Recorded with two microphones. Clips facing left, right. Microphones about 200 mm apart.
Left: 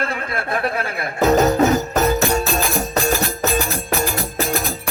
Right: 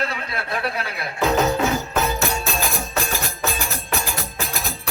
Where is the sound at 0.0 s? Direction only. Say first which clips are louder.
Left 3 dB; 50° left (ahead or behind).